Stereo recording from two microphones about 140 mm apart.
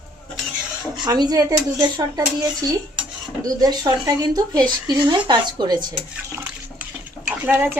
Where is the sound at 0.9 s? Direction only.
30° right (ahead or behind).